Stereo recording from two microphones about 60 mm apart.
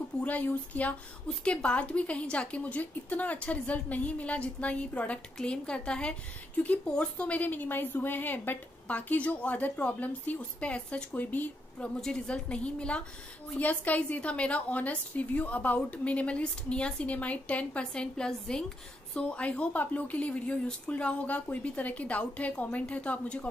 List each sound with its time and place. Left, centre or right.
0.2 s a woman's voice: left